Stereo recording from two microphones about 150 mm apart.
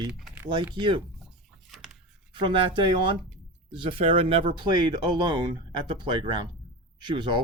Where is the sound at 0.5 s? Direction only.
30° right (ahead or behind).